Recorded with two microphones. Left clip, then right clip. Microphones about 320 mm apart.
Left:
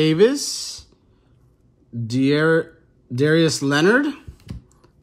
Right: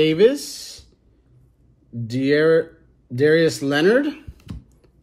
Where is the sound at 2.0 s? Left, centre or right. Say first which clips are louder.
Right 1 dB; centre.